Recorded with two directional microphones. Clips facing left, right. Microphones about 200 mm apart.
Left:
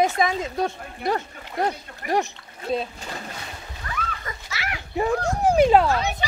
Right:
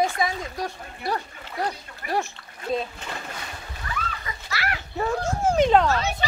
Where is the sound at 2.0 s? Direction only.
50° left (ahead or behind).